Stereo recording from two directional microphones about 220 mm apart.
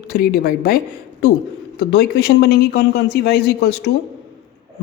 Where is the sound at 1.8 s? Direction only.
50° left (ahead or behind).